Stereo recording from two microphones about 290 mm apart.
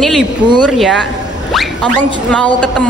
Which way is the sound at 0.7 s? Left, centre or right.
Centre.